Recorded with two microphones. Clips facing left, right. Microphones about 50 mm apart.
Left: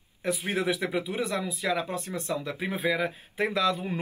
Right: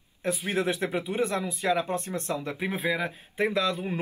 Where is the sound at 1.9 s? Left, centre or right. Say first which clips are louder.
Right 1 dB; right.